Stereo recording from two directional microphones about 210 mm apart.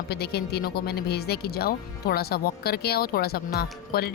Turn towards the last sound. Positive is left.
turn(degrees=50)  # may be behind; listen again after turning